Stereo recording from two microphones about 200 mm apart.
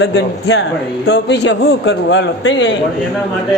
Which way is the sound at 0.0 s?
60° left (ahead or behind).